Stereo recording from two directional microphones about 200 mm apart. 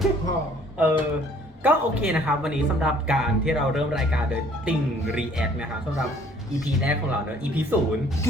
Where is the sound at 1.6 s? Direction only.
5° right (ahead or behind).